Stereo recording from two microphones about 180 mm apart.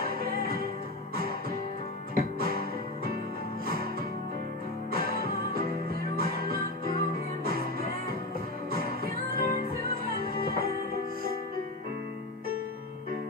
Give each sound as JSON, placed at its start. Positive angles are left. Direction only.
{"t": 0.0, "sound": "music", "side_deg": -55}
{"t": 2.1, "sound": "music", "side_deg": -55}
{"t": 4.9, "sound": "music", "side_deg": -55}
{"t": 8.6, "sound": "music", "side_deg": -55}